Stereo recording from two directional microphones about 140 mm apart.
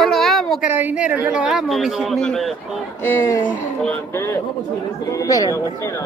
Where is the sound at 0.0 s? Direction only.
Centre (ahead or behind).